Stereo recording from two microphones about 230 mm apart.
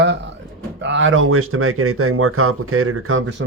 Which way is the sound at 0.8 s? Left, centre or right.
Right.